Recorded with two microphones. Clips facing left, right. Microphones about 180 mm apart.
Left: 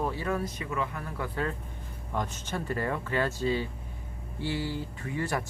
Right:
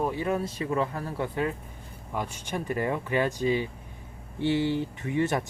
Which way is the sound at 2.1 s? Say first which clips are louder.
Right 1 dB; 10° right (ahead or behind).